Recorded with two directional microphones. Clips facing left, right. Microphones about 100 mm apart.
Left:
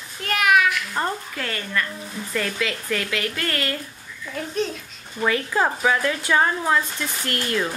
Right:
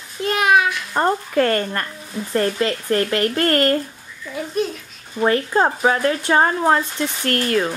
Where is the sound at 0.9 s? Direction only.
45° right (ahead or behind).